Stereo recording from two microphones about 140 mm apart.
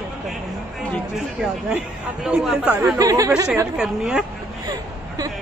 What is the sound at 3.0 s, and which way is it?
Speech, 25° right (ahead or behind).